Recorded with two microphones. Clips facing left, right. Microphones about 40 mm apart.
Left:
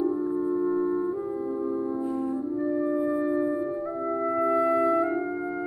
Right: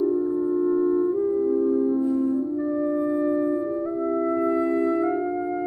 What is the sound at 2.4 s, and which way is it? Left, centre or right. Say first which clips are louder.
Music: right 2 dB; centre.